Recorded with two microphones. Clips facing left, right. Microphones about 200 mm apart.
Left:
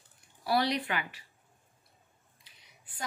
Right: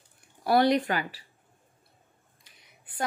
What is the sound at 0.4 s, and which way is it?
Speech, 55° right (ahead or behind).